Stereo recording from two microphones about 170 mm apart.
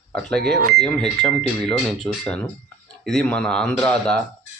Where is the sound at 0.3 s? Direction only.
70° right (ahead or behind).